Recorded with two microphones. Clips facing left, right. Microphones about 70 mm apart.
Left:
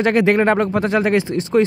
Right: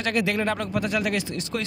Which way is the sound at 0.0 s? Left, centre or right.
Left.